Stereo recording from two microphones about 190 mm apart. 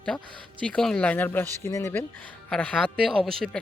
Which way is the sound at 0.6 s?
5° left (ahead or behind).